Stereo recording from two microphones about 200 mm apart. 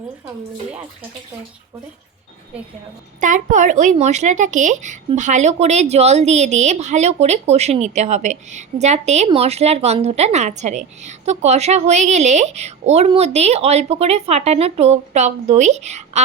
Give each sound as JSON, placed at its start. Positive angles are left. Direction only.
{"t": 3.2, "sound": "speech", "side_deg": -40}